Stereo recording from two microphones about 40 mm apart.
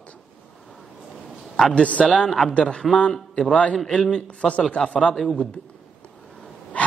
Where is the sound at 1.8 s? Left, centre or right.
Left.